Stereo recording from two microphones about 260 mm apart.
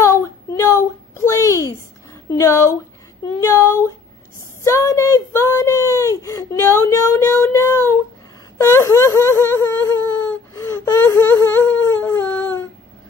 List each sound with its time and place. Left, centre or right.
0.0 s a sound: centre
2.3 s speech: centre
8.5 s whimper: centre